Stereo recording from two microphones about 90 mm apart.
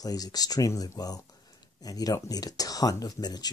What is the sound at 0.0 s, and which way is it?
Speech, 45° left (ahead or behind).